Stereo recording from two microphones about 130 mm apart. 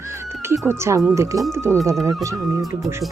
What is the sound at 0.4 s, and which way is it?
Speech, 20° right (ahead or behind).